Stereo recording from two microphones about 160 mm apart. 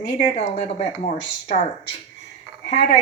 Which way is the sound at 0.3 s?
45° left (ahead or behind).